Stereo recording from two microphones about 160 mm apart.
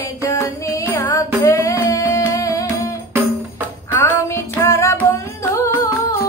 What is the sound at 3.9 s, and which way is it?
Music, 15° left (ahead or behind).